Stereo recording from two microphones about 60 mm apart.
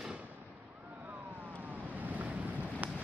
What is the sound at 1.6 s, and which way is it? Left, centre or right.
Vehicle, right.